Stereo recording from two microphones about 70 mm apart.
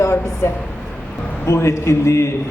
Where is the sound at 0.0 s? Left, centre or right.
Left.